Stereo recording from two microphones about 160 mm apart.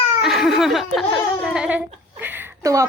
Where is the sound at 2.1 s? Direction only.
10° right (ahead or behind).